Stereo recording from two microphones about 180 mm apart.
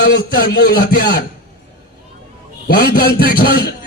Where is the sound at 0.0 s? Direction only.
65° left (ahead or behind).